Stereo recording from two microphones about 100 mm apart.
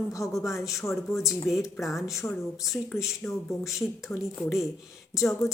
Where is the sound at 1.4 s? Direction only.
Centre (ahead or behind).